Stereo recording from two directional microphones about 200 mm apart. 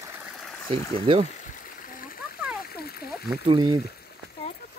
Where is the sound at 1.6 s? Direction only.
45° left (ahead or behind).